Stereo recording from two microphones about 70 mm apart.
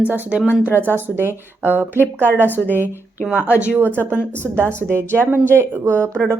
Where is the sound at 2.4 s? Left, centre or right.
Left.